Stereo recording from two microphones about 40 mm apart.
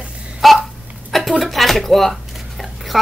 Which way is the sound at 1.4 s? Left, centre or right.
Centre.